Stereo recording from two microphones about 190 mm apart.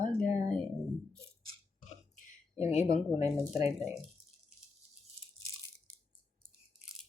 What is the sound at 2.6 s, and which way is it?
Speech, 35° left (ahead or behind).